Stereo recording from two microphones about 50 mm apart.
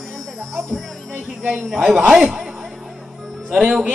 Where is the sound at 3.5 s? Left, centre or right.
Centre.